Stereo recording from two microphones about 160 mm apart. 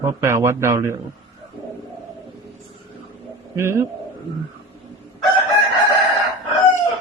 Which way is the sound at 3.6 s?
15° right (ahead or behind).